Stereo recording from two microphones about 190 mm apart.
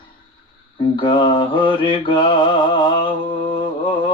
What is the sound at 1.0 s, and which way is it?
Mantra, 25° left (ahead or behind).